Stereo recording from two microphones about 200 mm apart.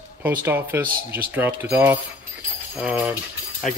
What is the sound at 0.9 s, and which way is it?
Speech, 45° right (ahead or behind).